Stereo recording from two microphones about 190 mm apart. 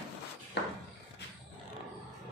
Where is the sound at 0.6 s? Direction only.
65° left (ahead or behind).